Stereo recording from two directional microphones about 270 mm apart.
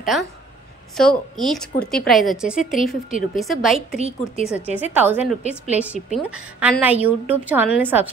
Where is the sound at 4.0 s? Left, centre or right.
Right.